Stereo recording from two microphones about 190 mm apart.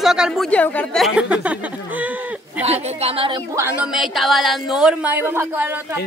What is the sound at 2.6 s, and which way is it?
Speech, 30° right (ahead or behind).